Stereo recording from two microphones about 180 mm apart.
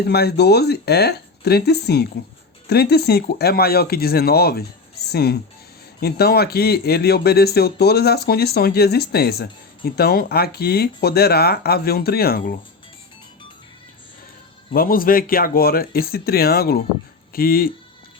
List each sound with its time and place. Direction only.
0.0 s speech: 65° left (ahead or behind)
14.7 s speech: 55° left (ahead or behind)